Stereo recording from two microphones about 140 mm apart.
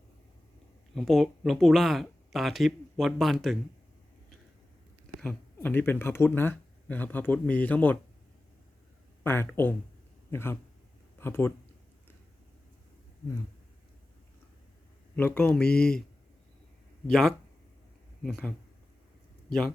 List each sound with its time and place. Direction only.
0.9 s speech: centre (ahead or behind)
5.2 s speech: 10° left (ahead or behind)
9.2 s speech: 15° left (ahead or behind)
15.1 s speech: 10° left (ahead or behind)
17.1 s speech: 5° left (ahead or behind)